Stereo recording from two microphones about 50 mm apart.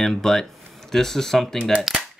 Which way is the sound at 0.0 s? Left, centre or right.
Centre.